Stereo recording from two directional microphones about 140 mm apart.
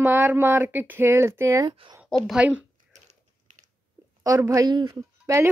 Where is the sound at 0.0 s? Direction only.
15° right (ahead or behind).